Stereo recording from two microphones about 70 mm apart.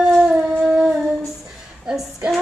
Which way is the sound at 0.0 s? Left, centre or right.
Centre.